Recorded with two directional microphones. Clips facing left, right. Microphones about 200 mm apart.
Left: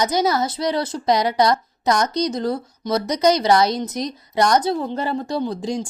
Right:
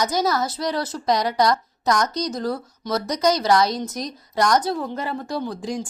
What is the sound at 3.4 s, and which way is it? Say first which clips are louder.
Speech: left 2 dB; 25° left (ahead or behind).